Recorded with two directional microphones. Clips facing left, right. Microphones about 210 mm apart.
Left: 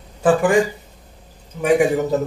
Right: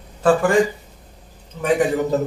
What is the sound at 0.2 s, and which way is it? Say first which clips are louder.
Speech: left 1 dB; 15° left (ahead or behind).